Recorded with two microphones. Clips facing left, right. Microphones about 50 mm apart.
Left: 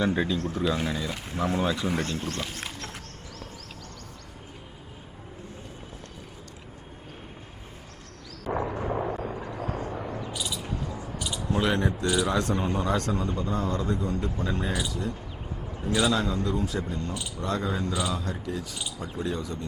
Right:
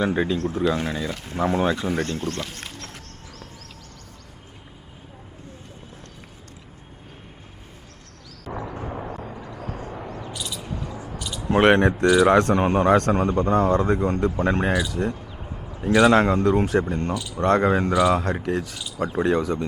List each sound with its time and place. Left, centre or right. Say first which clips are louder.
0.0 s speech: right 3 dB; centre
1.1 s speech: right 1 dB; centre
1.4 s speech: right 5 dB; right
2.0 s speech: right 3 dB; centre
8.6 s a sound: left 2 dB; centre
9.6 s vehicle: left 1 dB; left
10.2 s a sound: even; centre
10.8 s a sound: right 1 dB; right
11.4 s speech: right 10 dB; right